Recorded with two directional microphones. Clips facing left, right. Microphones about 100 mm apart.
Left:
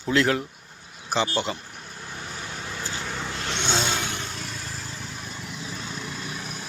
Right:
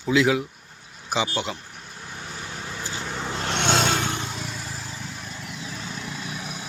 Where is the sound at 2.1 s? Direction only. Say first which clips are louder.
Even; centre (ahead or behind).